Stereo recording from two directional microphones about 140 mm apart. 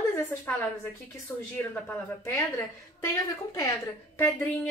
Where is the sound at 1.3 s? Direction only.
10° left (ahead or behind).